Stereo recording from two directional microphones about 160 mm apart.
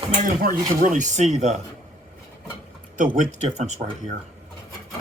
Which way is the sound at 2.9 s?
55° right (ahead or behind).